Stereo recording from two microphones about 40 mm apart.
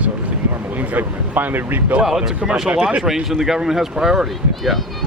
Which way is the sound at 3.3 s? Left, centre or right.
Centre.